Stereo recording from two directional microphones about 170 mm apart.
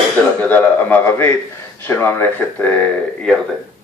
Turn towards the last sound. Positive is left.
turn(degrees=10)  # may be behind; listen again after turning